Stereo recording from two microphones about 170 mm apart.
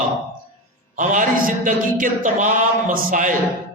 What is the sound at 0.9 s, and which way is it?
Mantra, 50° right (ahead or behind).